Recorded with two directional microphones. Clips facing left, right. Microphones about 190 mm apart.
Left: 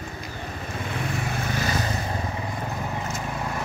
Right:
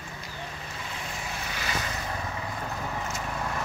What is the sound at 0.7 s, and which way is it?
Vehicle, 60° left (ahead or behind).